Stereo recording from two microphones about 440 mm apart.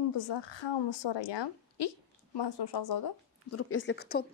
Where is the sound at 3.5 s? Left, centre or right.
Left.